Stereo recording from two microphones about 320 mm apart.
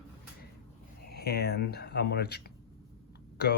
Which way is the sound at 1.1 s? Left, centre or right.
Left.